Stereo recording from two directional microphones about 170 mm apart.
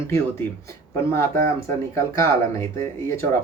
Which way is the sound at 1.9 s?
15° left (ahead or behind).